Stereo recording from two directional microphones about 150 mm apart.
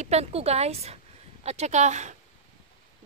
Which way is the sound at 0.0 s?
45° right (ahead or behind).